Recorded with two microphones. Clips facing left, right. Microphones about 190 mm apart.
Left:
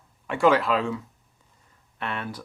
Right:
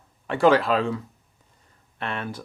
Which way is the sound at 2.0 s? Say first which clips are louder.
Right 1 dB; 25° right (ahead or behind).